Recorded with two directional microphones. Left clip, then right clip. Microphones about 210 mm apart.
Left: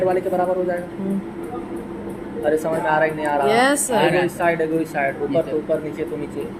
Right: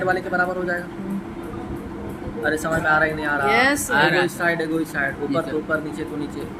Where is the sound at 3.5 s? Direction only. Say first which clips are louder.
Left 1 dB; 5° left (ahead or behind).